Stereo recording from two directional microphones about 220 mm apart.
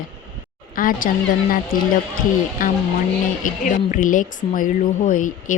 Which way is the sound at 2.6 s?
40° left (ahead or behind).